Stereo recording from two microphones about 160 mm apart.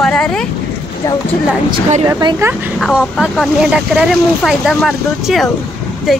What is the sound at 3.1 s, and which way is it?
A woman's voice, centre (ahead or behind).